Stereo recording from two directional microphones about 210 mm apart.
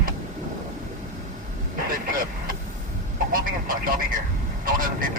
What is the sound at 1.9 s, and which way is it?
Vehicle, 45° right (ahead or behind).